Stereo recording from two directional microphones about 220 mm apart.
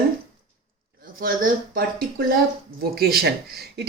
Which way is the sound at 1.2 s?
40° right (ahead or behind).